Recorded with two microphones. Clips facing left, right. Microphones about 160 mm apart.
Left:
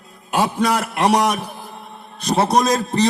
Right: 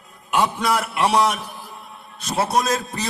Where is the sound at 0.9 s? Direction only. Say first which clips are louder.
Left 4 dB; 40° left (ahead or behind).